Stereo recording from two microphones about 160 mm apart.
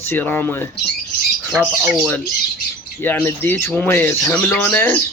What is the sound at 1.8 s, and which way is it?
Speech, 10° right (ahead or behind).